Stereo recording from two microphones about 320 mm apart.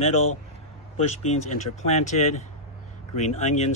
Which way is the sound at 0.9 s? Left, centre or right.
Left.